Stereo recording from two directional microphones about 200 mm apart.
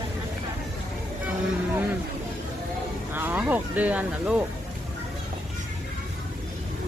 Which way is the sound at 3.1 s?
10° right (ahead or behind).